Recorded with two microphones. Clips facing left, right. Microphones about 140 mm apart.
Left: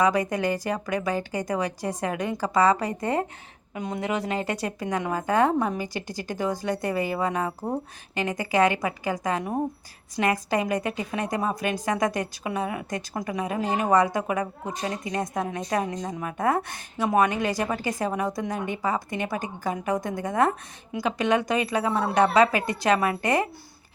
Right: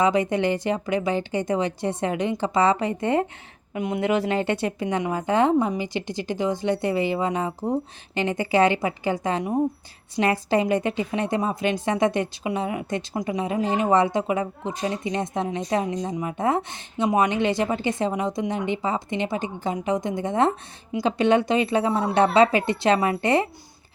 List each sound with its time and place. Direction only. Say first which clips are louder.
0.0 s a woman's voice: right 2 dB; 25° right (ahead or behind)